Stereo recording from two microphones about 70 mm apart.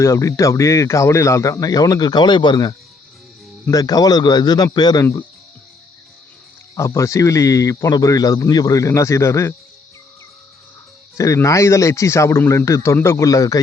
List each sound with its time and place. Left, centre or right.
0.0 s speech: left
3.7 s speech: left
6.7 s speech: left
11.4 s speech: left